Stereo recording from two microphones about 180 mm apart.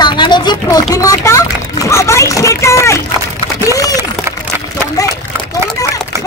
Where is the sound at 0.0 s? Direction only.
25° left (ahead or behind).